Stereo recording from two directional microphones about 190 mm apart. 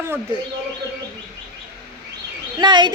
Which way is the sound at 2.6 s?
25° right (ahead or behind).